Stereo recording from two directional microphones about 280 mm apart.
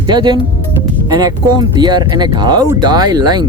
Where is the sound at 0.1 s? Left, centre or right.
Centre.